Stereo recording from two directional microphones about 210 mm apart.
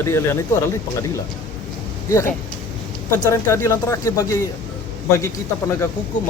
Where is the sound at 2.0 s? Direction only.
15° left (ahead or behind).